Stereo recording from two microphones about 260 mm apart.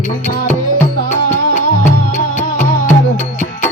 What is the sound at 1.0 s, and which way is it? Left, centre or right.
Music, left.